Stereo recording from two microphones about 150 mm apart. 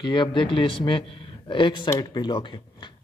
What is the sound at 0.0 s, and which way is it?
A man's voice, 30° left (ahead or behind).